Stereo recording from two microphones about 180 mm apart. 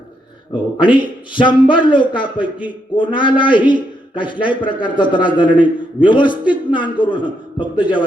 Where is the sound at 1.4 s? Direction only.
25° left (ahead or behind).